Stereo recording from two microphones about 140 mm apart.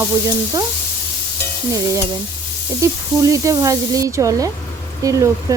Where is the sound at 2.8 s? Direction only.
20° right (ahead or behind).